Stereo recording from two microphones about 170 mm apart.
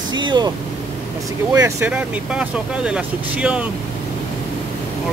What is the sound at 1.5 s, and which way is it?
Speech, 15° right (ahead or behind).